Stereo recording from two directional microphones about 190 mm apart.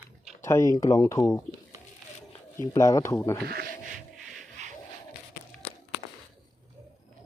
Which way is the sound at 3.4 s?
55° right (ahead or behind).